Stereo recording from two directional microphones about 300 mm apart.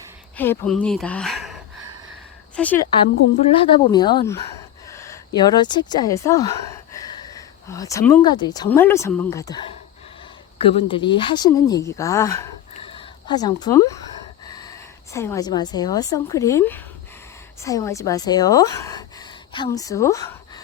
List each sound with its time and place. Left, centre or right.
0.3 s speech: centre
3.5 s a woman's voice: centre
4.9 s a sound: centre
5.9 s speech: centre
14.4 s a sound: centre
15.1 s a woman's voice: centre